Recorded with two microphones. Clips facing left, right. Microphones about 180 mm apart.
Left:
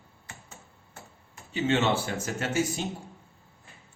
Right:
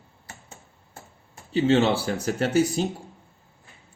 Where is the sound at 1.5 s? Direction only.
35° right (ahead or behind).